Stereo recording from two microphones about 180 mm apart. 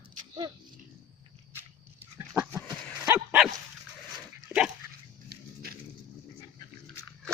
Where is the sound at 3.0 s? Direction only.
10° right (ahead or behind).